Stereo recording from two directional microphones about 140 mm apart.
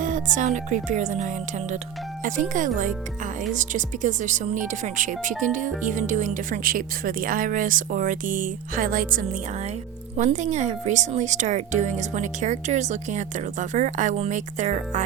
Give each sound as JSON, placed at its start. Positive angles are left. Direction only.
{"t": 0.0, "sound": "speech", "side_deg": -65}
{"t": 2.2, "sound": "speech", "side_deg": -70}
{"t": 10.2, "sound": "speech", "side_deg": -60}